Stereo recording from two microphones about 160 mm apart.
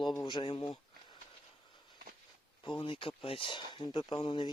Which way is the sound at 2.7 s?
30° left (ahead or behind).